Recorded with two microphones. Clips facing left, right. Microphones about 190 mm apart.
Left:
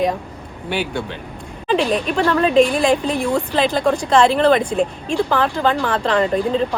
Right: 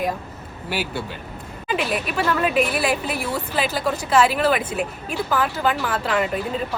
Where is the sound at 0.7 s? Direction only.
5° right (ahead or behind).